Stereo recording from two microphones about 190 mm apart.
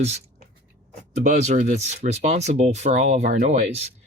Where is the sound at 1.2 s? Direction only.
40° right (ahead or behind).